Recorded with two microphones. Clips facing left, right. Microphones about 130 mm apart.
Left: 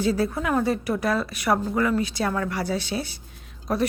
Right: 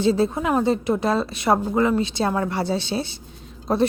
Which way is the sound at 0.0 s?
25° right (ahead or behind).